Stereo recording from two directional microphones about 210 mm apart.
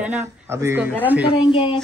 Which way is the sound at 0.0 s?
10° right (ahead or behind).